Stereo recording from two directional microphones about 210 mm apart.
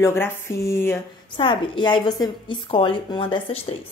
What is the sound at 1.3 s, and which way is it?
Speech, 25° left (ahead or behind).